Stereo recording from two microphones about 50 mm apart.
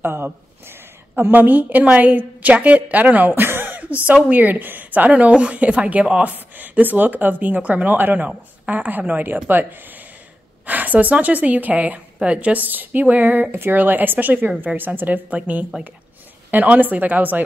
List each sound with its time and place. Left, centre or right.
0.0 s a sound: right
1.3 s a woman's voice: right
3.4 s a sound: right
4.3 s a woman's voice: right
15.7 s speech: centre
16.4 s a woman's voice: right